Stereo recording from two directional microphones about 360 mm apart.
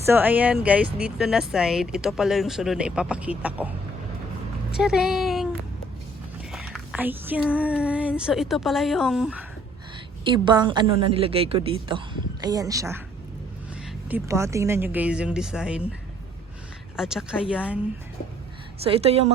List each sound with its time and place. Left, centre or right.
0.0 s speech: centre
4.8 s speech: centre
6.5 s speech: centre
10.2 s a woman's voice: centre
14.1 s speech: centre
17.0 s speech: centre
18.8 s a woman's voice: centre